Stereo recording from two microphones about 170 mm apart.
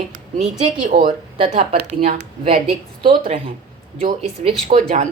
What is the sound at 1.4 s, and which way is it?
A woman's voice, 35° right (ahead or behind).